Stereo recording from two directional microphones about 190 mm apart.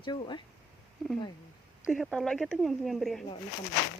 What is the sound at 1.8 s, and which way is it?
Speech, centre (ahead or behind).